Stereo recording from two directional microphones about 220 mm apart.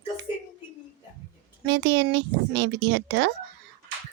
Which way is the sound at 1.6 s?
50° right (ahead or behind).